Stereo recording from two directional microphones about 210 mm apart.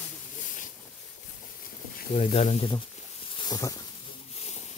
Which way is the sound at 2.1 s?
30° left (ahead or behind).